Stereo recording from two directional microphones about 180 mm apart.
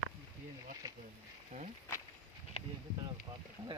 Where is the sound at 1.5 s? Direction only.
35° right (ahead or behind).